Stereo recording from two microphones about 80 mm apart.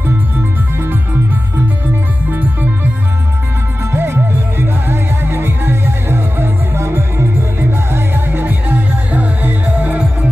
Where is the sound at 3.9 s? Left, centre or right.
Right.